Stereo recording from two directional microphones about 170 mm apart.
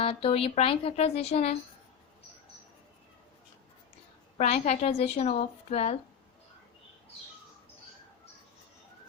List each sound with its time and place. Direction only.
0.0 s a woman's voice: 35° left (ahead or behind)
4.4 s a woman's voice: 40° left (ahead or behind)